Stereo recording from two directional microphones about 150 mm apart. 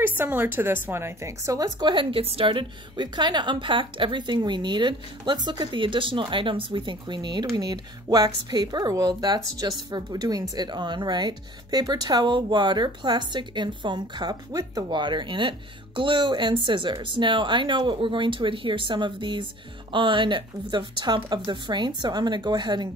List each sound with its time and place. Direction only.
0.0 s a woman's voice: 15° right (ahead or behind); by 22.8 s 30° right (ahead or behind)